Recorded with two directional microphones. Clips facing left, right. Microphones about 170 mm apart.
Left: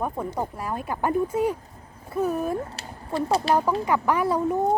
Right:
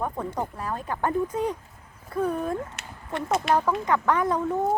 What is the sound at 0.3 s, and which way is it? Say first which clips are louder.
Speech: left 1 dB; 10° left (ahead or behind).